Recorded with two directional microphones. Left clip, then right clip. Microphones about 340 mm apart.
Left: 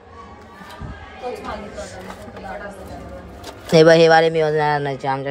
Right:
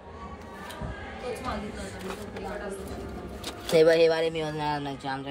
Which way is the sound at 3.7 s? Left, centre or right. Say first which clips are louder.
Left 9 dB; left.